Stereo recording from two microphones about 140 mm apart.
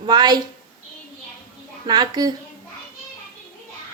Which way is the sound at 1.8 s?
30° right (ahead or behind).